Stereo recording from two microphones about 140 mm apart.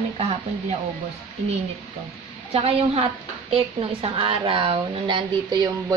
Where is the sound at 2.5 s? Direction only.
45° right (ahead or behind).